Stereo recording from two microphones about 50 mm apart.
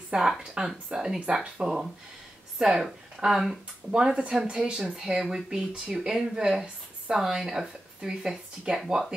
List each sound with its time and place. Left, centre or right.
0.1 s speech: centre